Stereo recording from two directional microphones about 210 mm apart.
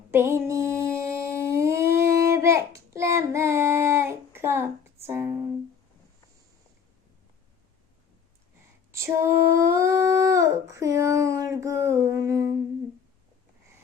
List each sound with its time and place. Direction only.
0.1 s humming: 10° right (ahead or behind)
8.9 s female singing: 15° right (ahead or behind)
9.2 s dog: 15° right (ahead or behind)